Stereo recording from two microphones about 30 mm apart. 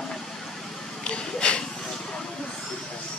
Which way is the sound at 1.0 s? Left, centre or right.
Left.